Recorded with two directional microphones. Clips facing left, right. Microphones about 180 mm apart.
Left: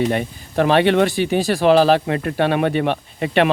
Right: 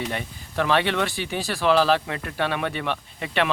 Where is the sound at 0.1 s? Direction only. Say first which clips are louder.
Left 9 dB; 55° left (ahead or behind).